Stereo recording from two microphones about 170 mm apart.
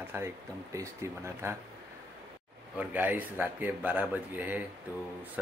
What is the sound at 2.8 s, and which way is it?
Speech, 10° right (ahead or behind).